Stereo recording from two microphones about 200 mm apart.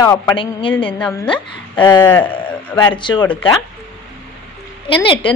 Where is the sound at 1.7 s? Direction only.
20° left (ahead or behind).